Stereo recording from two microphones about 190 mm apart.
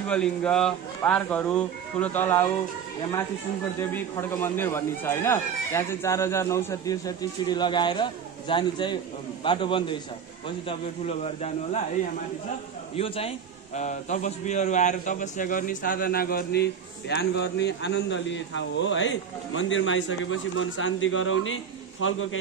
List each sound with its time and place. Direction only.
0.1 s speech: 5° left (ahead or behind)
3.9 s a man's voice: 10° left (ahead or behind)
11.1 s speech: 35° left (ahead or behind)
12.9 s a man's voice: 30° left (ahead or behind); by 22.4 s 90° left